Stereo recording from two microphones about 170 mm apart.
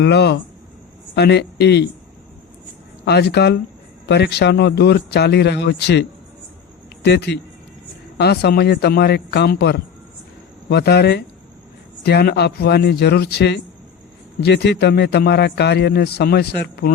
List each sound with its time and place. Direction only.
0.0 s speech: 80° left
3.0 s a man's voice: 75° left (ahead or behind)